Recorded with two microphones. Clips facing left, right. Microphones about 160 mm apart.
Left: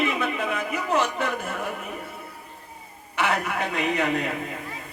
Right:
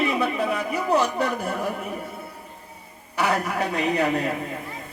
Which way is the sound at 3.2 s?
40° right (ahead or behind).